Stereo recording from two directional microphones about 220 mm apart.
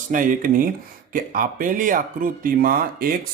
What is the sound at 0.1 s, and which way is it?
Speech, 35° right (ahead or behind).